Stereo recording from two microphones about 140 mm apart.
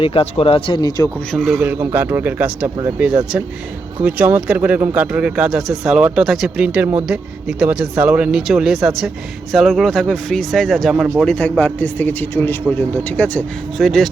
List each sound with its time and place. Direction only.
0.0 s speech: 40° left (ahead or behind)
1.3 s speech: 5° left (ahead or behind)
1.5 s speech: 15° right (ahead or behind)
4.0 s speech: 10° right (ahead or behind)